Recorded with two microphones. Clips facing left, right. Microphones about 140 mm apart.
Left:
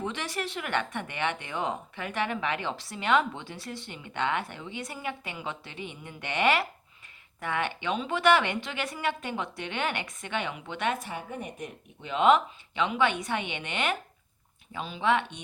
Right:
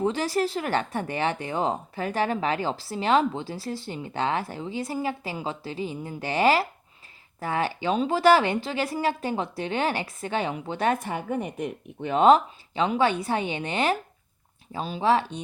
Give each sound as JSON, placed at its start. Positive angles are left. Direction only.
{"t": 0.0, "sound": "speech", "side_deg": -35}
{"t": 11.0, "sound": "a woman's voice", "side_deg": -60}
{"t": 12.1, "sound": "speech", "side_deg": -35}